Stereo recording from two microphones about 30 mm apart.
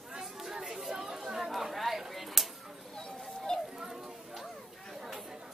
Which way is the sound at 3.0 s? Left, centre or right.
Left.